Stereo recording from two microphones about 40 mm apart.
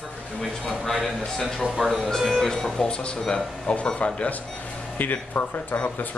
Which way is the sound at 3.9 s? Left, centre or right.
Left.